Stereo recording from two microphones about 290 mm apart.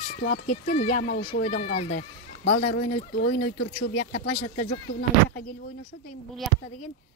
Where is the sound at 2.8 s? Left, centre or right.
Left.